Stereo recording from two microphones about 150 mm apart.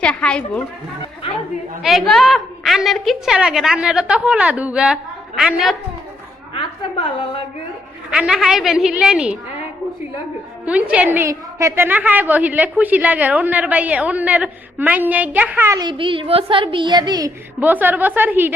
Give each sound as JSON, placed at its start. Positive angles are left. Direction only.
{"t": 0.0, "sound": "a woman's voice", "side_deg": 5}
{"t": 1.8, "sound": "a woman's voice", "side_deg": 0}
{"t": 6.5, "sound": "a woman's voice", "side_deg": 35}
{"t": 8.1, "sound": "a woman's voice", "side_deg": -5}
{"t": 10.7, "sound": "a woman's voice", "side_deg": -10}
{"t": 15.8, "sound": "a child's voice", "side_deg": -30}
{"t": 17.6, "sound": "a woman's voice", "side_deg": -10}